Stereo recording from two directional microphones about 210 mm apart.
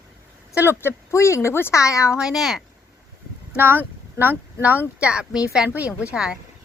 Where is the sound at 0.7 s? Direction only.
10° left (ahead or behind).